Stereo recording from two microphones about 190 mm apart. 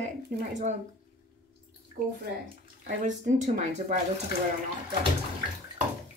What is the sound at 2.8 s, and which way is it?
A woman's voice, 40° right (ahead or behind).